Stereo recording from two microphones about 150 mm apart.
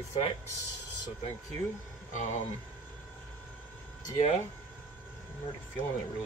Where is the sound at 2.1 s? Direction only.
50° left (ahead or behind).